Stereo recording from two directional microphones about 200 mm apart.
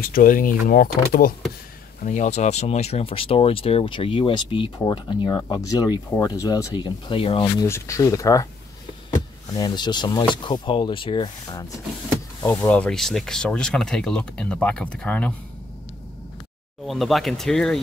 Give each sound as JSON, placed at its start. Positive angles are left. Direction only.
{"t": 0.0, "sound": "speech", "side_deg": 45}
{"t": 7.6, "sound": "speech", "side_deg": 15}
{"t": 9.5, "sound": "speech", "side_deg": 20}
{"t": 12.5, "sound": "speech", "side_deg": 5}
{"t": 16.8, "sound": "speech", "side_deg": 0}